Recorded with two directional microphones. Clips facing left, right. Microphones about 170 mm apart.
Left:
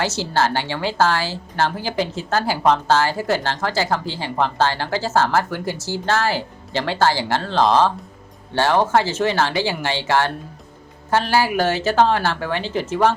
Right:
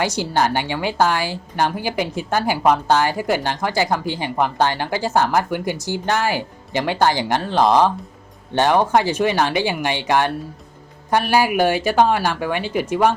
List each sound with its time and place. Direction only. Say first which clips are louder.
0.0 s a woman's voice: right 1 dB; 15° right (ahead or behind)